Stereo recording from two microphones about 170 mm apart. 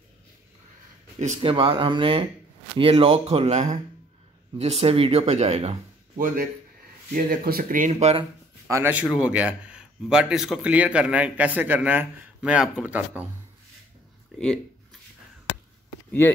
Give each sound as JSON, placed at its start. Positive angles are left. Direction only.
{"t": 1.2, "sound": "speech", "side_deg": -30}
{"t": 7.9, "sound": "speech", "side_deg": -35}
{"t": 8.6, "sound": "a man's voice", "side_deg": -15}
{"t": 14.4, "sound": "a sound", "side_deg": 5}